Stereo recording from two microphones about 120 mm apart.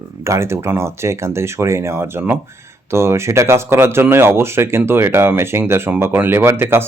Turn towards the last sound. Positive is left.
turn(degrees=-20)  # may be behind; listen again after turning